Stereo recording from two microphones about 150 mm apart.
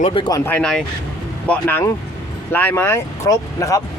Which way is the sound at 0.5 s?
5° left (ahead or behind).